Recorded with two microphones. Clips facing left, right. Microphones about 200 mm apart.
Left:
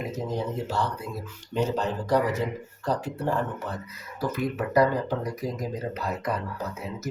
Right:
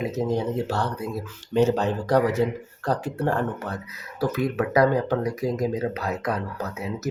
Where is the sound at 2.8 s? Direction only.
65° right (ahead or behind).